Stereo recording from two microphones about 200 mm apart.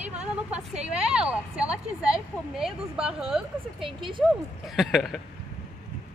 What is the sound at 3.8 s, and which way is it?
Speech, 25° right (ahead or behind).